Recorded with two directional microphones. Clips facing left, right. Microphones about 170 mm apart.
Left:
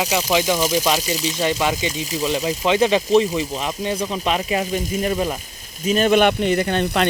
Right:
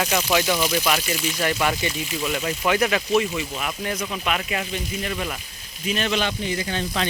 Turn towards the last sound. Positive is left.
turn(degrees=55)  # may be behind; listen again after turning